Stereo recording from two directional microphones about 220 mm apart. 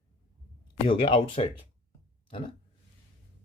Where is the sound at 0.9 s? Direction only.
25° left (ahead or behind).